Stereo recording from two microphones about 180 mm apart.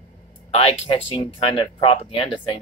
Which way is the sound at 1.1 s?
30° left (ahead or behind).